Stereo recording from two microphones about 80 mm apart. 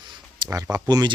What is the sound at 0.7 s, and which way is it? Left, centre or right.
Speech, right.